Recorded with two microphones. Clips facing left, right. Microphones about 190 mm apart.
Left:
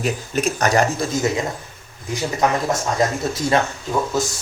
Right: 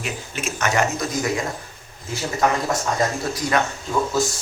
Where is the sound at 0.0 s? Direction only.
40° left (ahead or behind).